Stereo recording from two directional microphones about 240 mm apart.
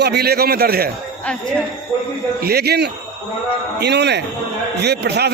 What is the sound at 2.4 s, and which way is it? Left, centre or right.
A man's voice, right.